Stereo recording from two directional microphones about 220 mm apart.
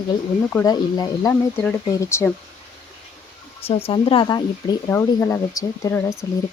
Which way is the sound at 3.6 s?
25° left (ahead or behind).